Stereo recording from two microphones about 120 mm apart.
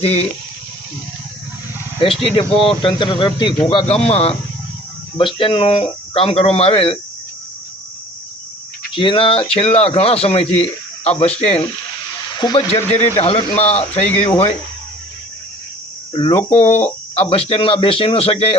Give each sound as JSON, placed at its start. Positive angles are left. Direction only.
{"t": 0.0, "sound": "a man's voice", "side_deg": 55}
{"t": 2.0, "sound": "speech", "side_deg": 50}
{"t": 3.7, "sound": "a man's voice", "side_deg": 50}
{"t": 5.1, "sound": "speech", "side_deg": 45}
{"t": 9.0, "sound": "a man's voice", "side_deg": 45}
{"t": 12.4, "sound": "speech", "side_deg": 40}
{"t": 12.7, "sound": "a man's voice", "side_deg": 65}
{"t": 13.1, "sound": "a man's voice", "side_deg": 50}
{"t": 16.1, "sound": "speech", "side_deg": 50}
{"t": 16.5, "sound": "speech", "side_deg": 70}